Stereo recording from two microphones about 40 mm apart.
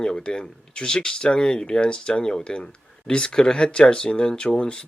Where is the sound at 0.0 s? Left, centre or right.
Left.